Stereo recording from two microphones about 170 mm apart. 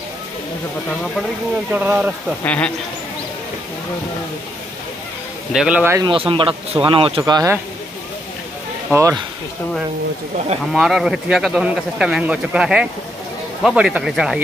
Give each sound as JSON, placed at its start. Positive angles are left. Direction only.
{"t": 1.7, "sound": "speech", "side_deg": -5}
{"t": 2.4, "sound": "speech", "side_deg": 10}
{"t": 5.5, "sound": "speech", "side_deg": -5}
{"t": 5.9, "sound": "speech", "side_deg": -30}
{"t": 10.7, "sound": "a man's voice", "side_deg": 0}